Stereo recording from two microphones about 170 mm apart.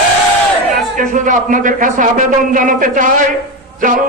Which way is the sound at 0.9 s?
50° right (ahead or behind).